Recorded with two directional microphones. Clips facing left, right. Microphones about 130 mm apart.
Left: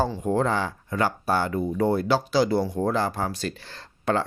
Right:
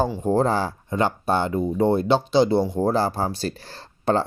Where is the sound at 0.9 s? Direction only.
25° right (ahead or behind).